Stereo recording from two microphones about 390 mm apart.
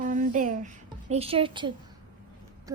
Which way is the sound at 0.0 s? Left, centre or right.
Centre.